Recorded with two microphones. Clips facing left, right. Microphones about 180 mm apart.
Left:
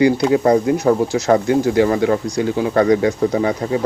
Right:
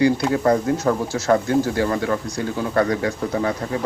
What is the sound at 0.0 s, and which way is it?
Speech, 15° left (ahead or behind).